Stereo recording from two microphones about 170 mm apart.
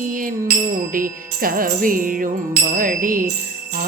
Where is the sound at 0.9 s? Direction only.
55° right (ahead or behind).